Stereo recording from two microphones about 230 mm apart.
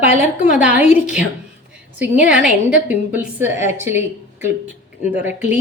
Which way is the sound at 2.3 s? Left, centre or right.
Centre.